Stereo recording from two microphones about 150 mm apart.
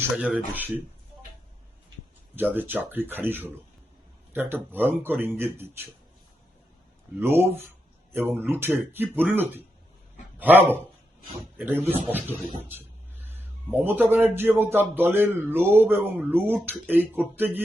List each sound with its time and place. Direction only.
0.0 s speech: 5° right (ahead or behind)
2.3 s speech: 10° right (ahead or behind)
7.2 s speech: 15° right (ahead or behind)
13.8 s speech: 15° right (ahead or behind)